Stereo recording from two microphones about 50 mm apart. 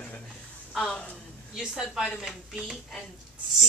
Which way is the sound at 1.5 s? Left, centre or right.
Centre.